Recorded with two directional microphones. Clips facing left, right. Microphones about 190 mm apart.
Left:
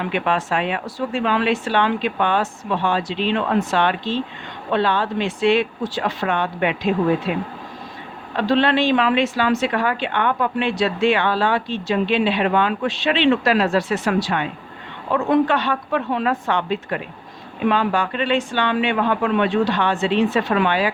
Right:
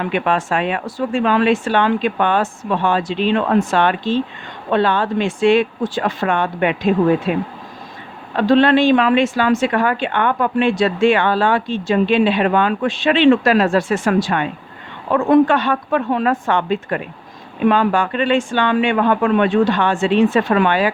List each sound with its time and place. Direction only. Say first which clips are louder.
0.1 s speech: right 2 dB; 50° right (ahead or behind)
8.4 s speech: right 5 dB; 45° right (ahead or behind)